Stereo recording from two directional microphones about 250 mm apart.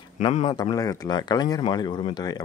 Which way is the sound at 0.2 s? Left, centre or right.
Left.